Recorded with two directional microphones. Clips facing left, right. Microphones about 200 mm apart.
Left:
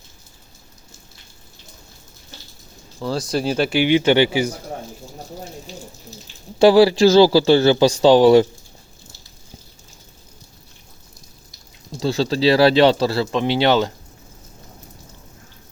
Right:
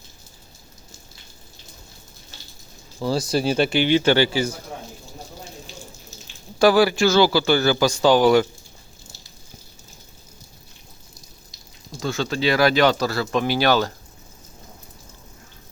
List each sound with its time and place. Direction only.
3.0 s speech: centre (ahead or behind); by 4.5 s 15° left (ahead or behind)
6.6 s a man's voice: 30° left (ahead or behind)
11.9 s speech: 30° left (ahead or behind)